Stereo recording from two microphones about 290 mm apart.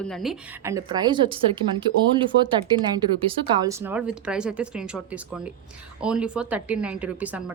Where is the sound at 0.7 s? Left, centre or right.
Centre.